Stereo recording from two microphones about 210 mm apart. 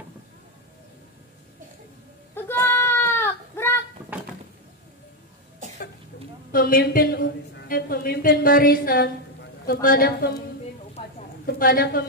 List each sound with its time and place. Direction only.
2.3 s goat: 10° left (ahead or behind)
6.5 s a woman's voice: 45° left (ahead or behind)
11.4 s a woman's voice: 45° left (ahead or behind)